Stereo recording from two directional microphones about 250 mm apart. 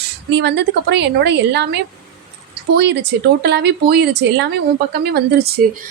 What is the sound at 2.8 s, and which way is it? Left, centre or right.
A woman's voice, right.